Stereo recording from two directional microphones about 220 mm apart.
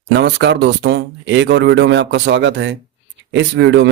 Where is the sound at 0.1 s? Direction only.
50° right (ahead or behind).